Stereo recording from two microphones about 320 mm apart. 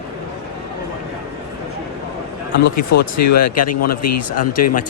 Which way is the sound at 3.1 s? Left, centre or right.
Left.